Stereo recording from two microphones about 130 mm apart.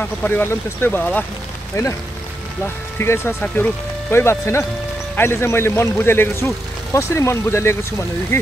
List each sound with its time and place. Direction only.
0.0 s speech: 15° left (ahead or behind)
3.0 s speech: 20° left (ahead or behind)